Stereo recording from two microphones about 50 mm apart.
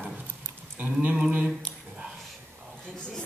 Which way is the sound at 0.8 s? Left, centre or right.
Right.